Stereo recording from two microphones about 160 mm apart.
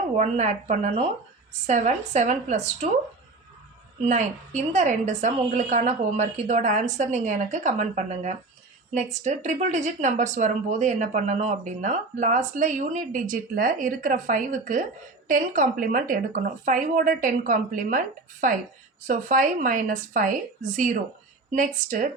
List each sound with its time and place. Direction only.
0.2 s speech: 45° right (ahead or behind)
4.0 s a woman's voice: 45° right (ahead or behind)
21.5 s a woman's voice: 55° right (ahead or behind)